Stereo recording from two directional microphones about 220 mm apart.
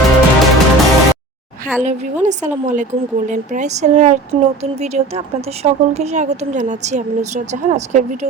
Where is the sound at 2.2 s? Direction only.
35° right (ahead or behind).